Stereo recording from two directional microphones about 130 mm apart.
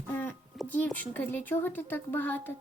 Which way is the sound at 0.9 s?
15° left (ahead or behind).